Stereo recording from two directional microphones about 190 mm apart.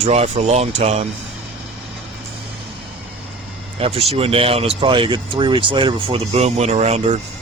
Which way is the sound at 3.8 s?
30° right (ahead or behind).